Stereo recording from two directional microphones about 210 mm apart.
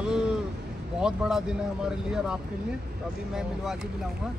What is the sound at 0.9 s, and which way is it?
Speech, 5° right (ahead or behind).